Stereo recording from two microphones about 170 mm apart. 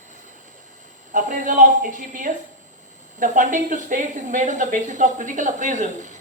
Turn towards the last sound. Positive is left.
turn(degrees=-45)  # may be behind; listen again after turning